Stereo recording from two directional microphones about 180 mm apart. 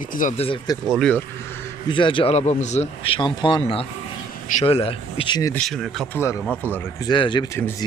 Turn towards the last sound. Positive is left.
turn(degrees=10)  # may be behind; listen again after turning